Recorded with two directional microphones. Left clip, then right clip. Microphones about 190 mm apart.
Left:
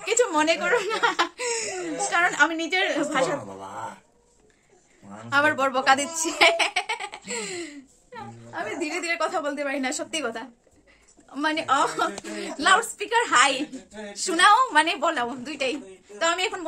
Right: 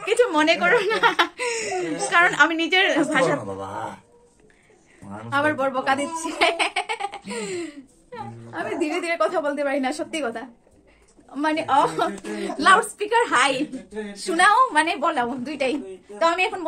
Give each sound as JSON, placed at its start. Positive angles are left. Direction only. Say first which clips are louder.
{"t": 0.0, "sound": "speech", "louder": "right 3 dB", "side_deg": 5}
{"t": 5.3, "sound": "speech", "louder": "even", "side_deg": 40}
{"t": 6.5, "sound": "baby laughter", "louder": "even", "side_deg": 10}
{"t": 8.1, "sound": "a woman's voice", "louder": "right 3 dB", "side_deg": -5}
{"t": 15.5, "sound": "speech", "louder": "right 3 dB", "side_deg": -5}